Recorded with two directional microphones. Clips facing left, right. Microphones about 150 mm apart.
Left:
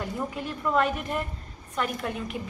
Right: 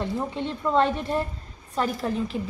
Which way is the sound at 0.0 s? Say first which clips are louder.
Right 4 dB; 25° right (ahead or behind).